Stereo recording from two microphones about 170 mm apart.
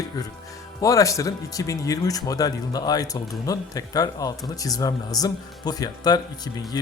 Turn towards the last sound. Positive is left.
turn(degrees=25)  # may be behind; listen again after turning